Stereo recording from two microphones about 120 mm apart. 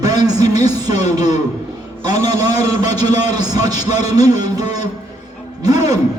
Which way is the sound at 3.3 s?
35° right (ahead or behind).